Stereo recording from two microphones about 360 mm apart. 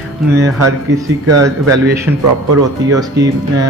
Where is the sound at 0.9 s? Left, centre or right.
Right.